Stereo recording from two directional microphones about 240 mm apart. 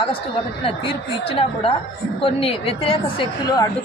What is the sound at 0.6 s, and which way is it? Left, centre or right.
A woman's voice, left.